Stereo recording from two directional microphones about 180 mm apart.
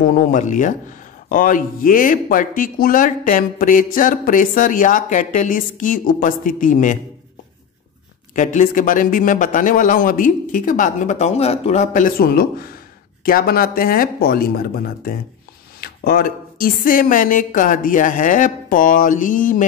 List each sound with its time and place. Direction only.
0.0 s speech: 45° left (ahead or behind)
8.4 s speech: 45° left (ahead or behind)